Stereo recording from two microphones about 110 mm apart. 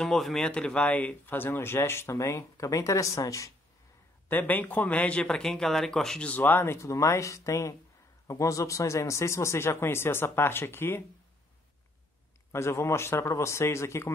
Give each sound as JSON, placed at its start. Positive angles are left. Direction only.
{"t": 0.0, "sound": "speech", "side_deg": 5}
{"t": 4.3, "sound": "speech", "side_deg": 15}
{"t": 12.5, "sound": "speech", "side_deg": 25}